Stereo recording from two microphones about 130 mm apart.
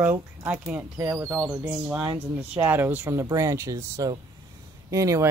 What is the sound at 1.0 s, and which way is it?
Speech, 25° right (ahead or behind).